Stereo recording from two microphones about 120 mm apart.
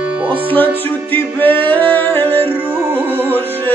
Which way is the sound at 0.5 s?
15° left (ahead or behind).